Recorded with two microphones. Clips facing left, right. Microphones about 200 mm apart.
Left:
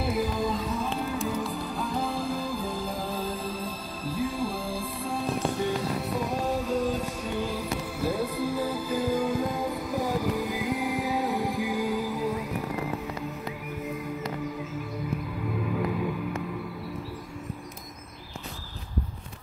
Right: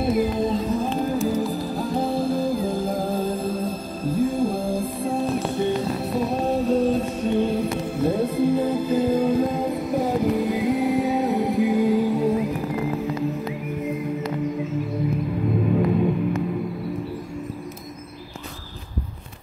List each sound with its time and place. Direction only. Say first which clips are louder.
0.0 s music: right 6 dB; 25° right (ahead or behind)
0.7 s music: right 7 dB; 40° right (ahead or behind)
6.1 s music: right 8 dB; 30° right (ahead or behind)
15.6 s music: right 8 dB; 30° right (ahead or behind)